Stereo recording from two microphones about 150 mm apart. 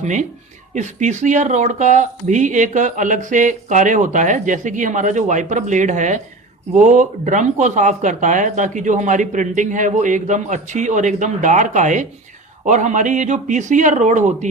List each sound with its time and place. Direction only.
0.0 s speech: 55° right (ahead or behind)